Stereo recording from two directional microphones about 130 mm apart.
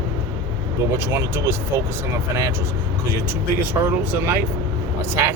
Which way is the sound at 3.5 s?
15° right (ahead or behind).